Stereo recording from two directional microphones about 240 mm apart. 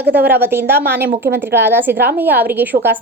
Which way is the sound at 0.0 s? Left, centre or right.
Right.